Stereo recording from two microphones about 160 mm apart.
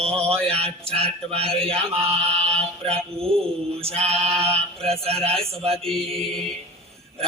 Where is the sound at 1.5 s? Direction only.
35° right (ahead or behind).